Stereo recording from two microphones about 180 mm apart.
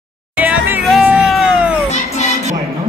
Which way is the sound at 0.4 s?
10° right (ahead or behind).